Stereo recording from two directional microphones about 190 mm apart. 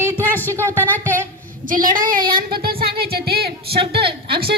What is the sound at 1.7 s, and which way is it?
Speech, 45° right (ahead or behind).